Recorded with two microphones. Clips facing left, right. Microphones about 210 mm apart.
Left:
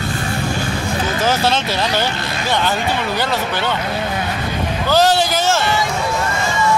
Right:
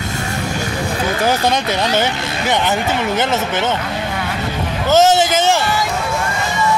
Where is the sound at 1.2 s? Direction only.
15° right (ahead or behind).